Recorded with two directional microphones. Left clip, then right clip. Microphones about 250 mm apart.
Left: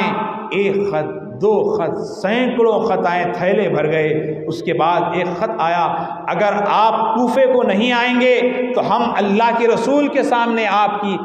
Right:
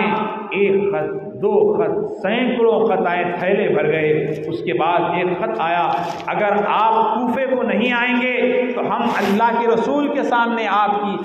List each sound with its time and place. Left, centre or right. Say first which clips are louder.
1.4 s a man's voice: even; left